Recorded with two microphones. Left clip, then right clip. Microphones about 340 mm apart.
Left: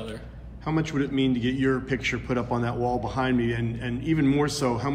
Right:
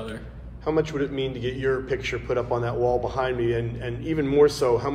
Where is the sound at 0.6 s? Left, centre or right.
Left.